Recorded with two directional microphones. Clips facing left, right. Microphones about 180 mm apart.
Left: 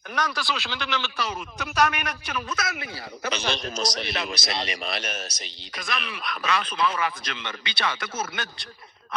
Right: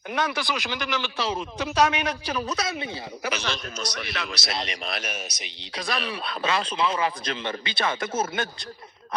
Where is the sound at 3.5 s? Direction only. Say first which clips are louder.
Left 4 dB; 30° left (ahead or behind).